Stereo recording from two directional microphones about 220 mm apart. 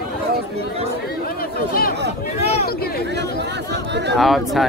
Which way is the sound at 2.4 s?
30° left (ahead or behind).